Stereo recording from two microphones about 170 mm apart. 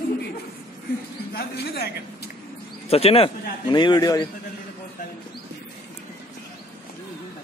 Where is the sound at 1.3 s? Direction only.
70° left (ahead or behind).